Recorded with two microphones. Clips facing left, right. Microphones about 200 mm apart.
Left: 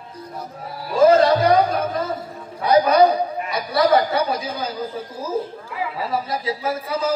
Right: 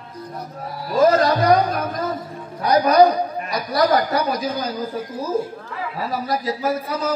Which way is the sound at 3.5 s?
25° left (ahead or behind).